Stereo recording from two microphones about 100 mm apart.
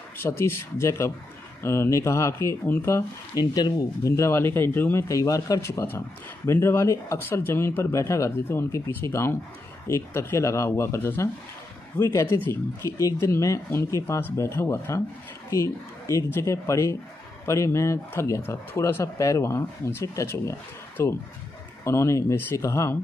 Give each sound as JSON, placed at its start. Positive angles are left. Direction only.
{"t": 0.2, "sound": "speech", "side_deg": 25}
{"t": 3.3, "sound": "speech", "side_deg": 40}
{"t": 5.0, "sound": "speech", "side_deg": 30}